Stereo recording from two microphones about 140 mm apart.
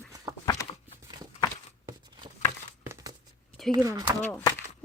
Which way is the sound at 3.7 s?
25° right (ahead or behind).